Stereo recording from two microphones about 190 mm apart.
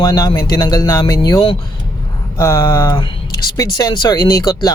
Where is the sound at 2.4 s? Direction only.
15° left (ahead or behind).